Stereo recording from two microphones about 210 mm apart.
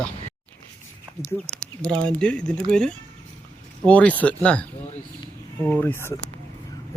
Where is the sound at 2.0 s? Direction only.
5° left (ahead or behind).